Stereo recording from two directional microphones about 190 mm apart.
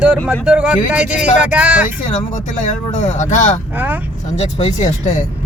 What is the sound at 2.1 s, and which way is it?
Speech, 40° left (ahead or behind).